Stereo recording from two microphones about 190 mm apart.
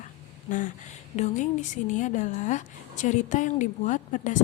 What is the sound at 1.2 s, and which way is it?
A woman's voice, 40° left (ahead or behind).